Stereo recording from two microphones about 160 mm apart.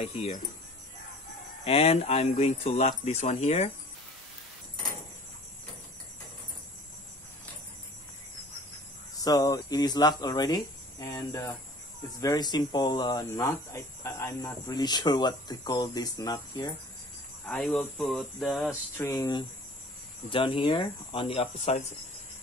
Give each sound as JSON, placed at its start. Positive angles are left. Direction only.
{"t": 0.0, "sound": "speech", "side_deg": 40}
{"t": 1.6, "sound": "speech", "side_deg": 40}
{"t": 9.2, "sound": "speech", "side_deg": 25}
{"t": 17.5, "sound": "speech", "side_deg": 5}
{"t": 18.9, "sound": "speech", "side_deg": 20}